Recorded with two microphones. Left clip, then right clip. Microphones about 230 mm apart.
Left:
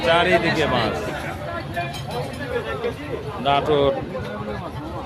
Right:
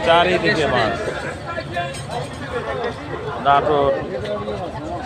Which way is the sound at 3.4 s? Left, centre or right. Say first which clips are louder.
Right 3 dB; left.